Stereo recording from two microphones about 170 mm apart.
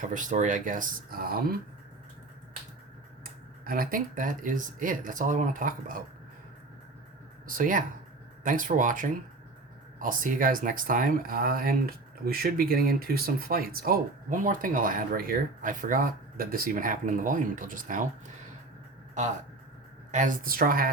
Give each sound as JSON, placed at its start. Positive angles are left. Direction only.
{"t": 0.0, "sound": "speech", "side_deg": -50}
{"t": 3.6, "sound": "speech", "side_deg": -60}
{"t": 7.4, "sound": "speech", "side_deg": -55}
{"t": 20.1, "sound": "speech", "side_deg": -50}